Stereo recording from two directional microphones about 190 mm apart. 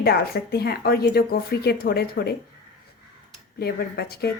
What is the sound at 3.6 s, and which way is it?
Speech, 55° left (ahead or behind).